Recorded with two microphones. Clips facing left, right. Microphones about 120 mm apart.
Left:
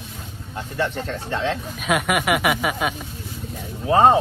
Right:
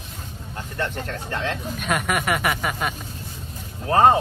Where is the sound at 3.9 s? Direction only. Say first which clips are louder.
Left 1 dB; 20° left (ahead or behind).